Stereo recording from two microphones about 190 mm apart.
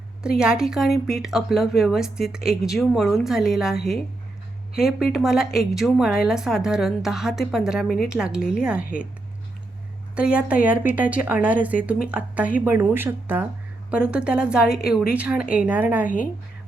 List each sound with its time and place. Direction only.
0.2 s a woman's voice: 5° right (ahead or behind)
4.8 s a woman's voice: centre (ahead or behind)
10.2 s a woman's voice: 5° right (ahead or behind)
16.0 s speech: 45° left (ahead or behind)